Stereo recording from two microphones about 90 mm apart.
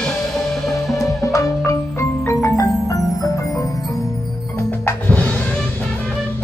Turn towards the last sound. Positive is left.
turn(degrees=15)  # may be behind; listen again after turning